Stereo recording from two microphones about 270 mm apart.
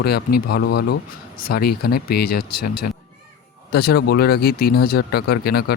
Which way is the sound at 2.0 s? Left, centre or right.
Left.